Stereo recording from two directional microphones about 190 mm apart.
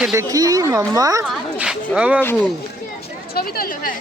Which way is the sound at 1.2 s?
5° right (ahead or behind).